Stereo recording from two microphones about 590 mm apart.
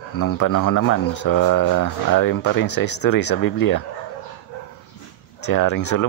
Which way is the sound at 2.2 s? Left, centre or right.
Centre.